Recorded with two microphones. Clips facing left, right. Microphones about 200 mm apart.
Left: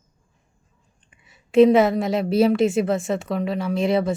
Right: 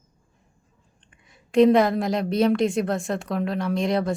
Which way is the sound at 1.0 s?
5° left (ahead or behind).